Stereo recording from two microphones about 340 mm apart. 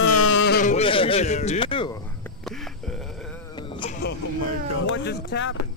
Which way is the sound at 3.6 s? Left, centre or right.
Centre.